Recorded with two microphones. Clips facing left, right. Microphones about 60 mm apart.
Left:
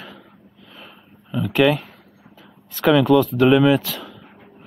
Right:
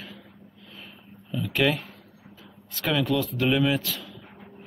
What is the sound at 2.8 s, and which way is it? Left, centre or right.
Speech, left.